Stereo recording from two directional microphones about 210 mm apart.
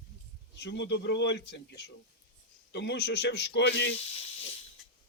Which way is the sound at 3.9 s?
30° left (ahead or behind).